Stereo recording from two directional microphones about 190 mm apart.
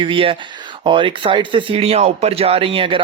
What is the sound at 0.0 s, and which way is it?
Speech, 25° right (ahead or behind).